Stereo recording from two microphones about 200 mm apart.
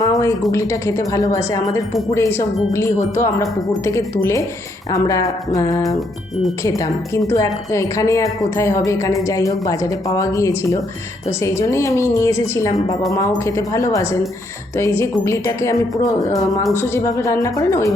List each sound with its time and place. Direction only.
0.0 s a sound: 15° left (ahead or behind)
0.5 s a woman's voice: 15° left (ahead or behind)
6.7 s a woman's voice: 15° left (ahead or behind)
16.7 s a woman's voice: 15° left (ahead or behind)